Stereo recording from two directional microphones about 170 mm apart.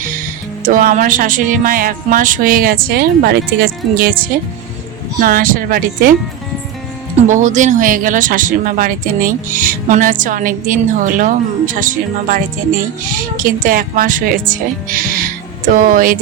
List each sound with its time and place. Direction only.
0.6 s speech: 50° right (ahead or behind)
7.3 s speech: 45° right (ahead or behind)